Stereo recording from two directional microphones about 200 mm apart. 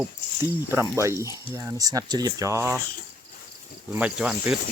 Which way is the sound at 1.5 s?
15° right (ahead or behind).